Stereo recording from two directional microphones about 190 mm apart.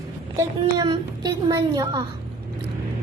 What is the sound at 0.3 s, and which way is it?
Laughter, 20° right (ahead or behind).